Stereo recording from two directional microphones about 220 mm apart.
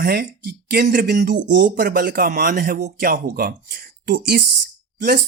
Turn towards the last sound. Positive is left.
turn(degrees=-45)  # may be behind; listen again after turning